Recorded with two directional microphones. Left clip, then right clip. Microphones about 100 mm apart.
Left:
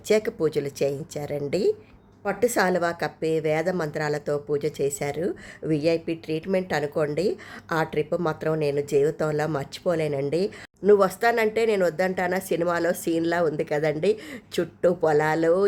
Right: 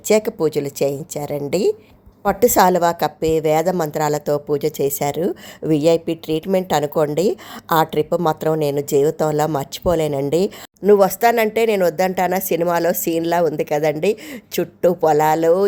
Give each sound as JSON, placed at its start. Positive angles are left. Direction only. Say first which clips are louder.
{"t": 0.1, "sound": "a woman's voice", "louder": "right 6 dB", "side_deg": -30}
{"t": 2.2, "sound": "a woman's voice", "louder": "right 9 dB", "side_deg": -50}